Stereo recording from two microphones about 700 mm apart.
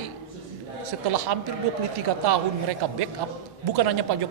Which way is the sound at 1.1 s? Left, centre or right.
Right.